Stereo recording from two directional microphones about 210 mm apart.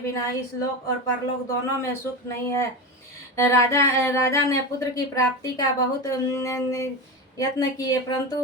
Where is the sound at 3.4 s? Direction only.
15° left (ahead or behind).